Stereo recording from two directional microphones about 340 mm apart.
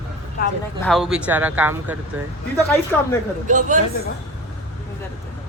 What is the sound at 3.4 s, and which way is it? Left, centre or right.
Speech, right.